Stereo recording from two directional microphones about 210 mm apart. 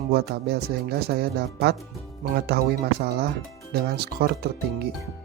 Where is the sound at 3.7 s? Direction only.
50° right (ahead or behind).